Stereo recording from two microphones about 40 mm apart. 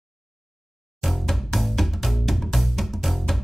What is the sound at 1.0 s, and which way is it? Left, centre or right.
Music, centre.